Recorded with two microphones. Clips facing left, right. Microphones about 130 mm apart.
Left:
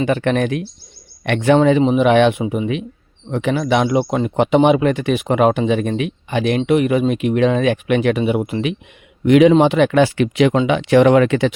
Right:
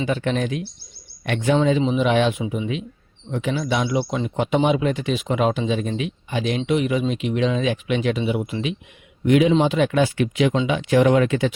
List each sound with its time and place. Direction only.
0.0 s speech: 65° left (ahead or behind)
3.8 s speech: 50° left (ahead or behind)
9.2 s speech: 80° left
9.5 s speech: 65° left (ahead or behind)